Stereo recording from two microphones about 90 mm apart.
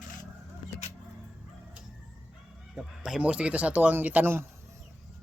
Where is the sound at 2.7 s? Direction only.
5° right (ahead or behind); by 4.4 s 20° right (ahead or behind).